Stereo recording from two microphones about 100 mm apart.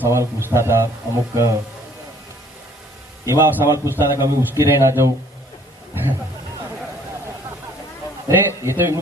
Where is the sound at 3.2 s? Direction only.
30° right (ahead or behind).